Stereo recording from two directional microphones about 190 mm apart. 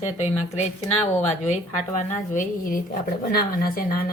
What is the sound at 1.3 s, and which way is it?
A woman's voice, 35° left (ahead or behind).